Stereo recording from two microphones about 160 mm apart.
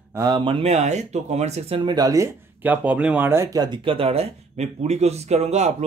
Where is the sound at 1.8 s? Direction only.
25° right (ahead or behind).